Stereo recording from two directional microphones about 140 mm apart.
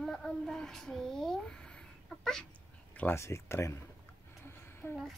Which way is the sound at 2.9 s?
15° left (ahead or behind).